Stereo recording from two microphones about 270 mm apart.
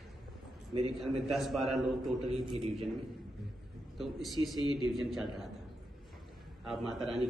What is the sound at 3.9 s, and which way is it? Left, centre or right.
Speech, centre.